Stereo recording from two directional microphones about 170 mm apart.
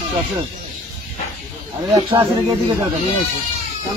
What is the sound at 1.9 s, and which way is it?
Speech, 20° right (ahead or behind).